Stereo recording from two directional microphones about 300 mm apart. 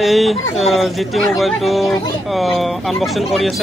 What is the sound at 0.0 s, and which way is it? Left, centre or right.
Speech, centre.